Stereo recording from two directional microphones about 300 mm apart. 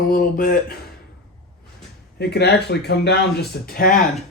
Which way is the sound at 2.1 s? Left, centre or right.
Left.